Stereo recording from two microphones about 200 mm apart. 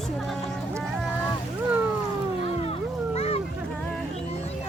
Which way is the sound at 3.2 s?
30° left (ahead or behind).